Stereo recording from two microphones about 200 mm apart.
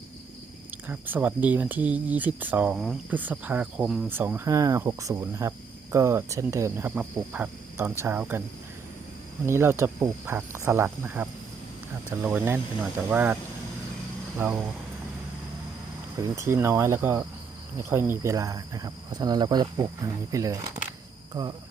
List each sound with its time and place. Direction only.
0.9 s speech: 10° right (ahead or behind)
9.5 s speech: 15° right (ahead or behind)
14.3 s speech: 5° right (ahead or behind)
16.2 s speech: 15° right (ahead or behind)